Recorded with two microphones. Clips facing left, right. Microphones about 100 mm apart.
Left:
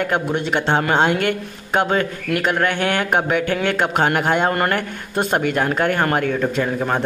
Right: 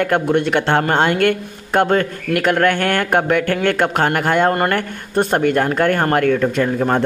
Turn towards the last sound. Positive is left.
turn(degrees=-55)  # may be behind; listen again after turning